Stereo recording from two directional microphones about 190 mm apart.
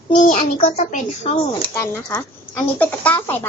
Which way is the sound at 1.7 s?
15° left (ahead or behind).